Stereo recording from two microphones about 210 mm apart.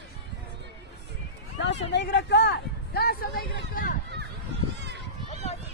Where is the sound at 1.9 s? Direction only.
55° left (ahead or behind).